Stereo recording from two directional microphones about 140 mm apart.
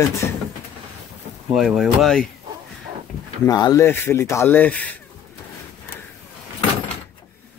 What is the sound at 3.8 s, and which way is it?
Speech, 15° left (ahead or behind).